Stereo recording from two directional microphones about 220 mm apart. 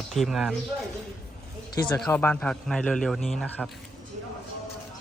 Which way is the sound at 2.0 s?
5° left (ahead or behind).